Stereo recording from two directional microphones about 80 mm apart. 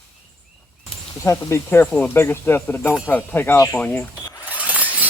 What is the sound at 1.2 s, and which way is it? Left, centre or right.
Speech, left.